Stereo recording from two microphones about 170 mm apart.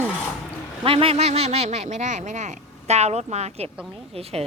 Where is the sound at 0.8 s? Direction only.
35° right (ahead or behind).